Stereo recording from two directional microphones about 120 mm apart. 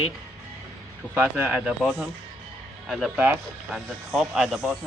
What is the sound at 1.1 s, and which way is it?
Speech, 15° right (ahead or behind).